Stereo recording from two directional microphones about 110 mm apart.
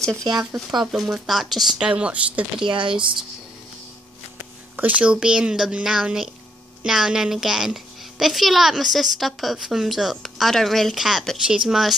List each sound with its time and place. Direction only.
0.1 s speech: 35° right (ahead or behind)
0.7 s a woman's voice: 5° right (ahead or behind)
2.6 s speech: 50° right (ahead or behind)
4.7 s a woman's voice: 15° right (ahead or behind)